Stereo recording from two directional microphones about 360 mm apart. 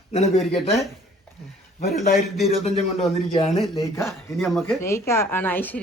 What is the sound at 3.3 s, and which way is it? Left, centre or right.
Speech, centre.